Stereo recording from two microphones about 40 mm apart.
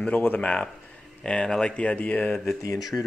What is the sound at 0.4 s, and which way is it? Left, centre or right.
Speech, left.